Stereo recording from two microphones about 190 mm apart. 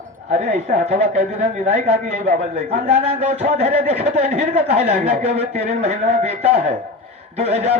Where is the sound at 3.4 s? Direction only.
35° right (ahead or behind).